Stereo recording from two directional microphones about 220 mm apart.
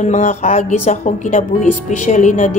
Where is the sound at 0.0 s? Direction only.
35° left (ahead or behind).